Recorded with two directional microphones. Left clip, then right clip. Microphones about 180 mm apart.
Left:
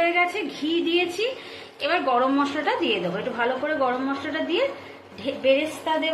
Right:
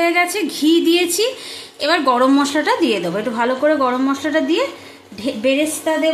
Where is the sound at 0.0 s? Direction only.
90° right.